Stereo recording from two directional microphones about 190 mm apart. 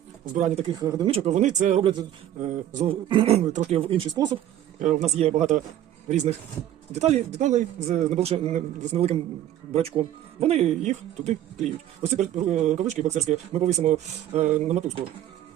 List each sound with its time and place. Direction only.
0.3 s speech: 40° right (ahead or behind)
0.7 s speech: 20° right (ahead or behind)
1.1 s speech: 35° right (ahead or behind)
4.8 s speech: 40° right (ahead or behind)